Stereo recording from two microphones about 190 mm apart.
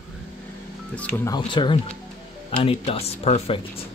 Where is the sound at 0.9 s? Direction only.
15° left (ahead or behind); by 3.6 s 30° left (ahead or behind).